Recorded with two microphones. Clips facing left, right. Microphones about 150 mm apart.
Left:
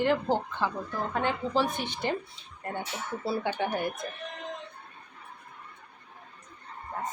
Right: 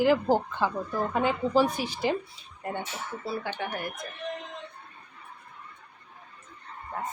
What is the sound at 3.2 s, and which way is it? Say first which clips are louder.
Speech: left 4 dB; 30° left (ahead or behind).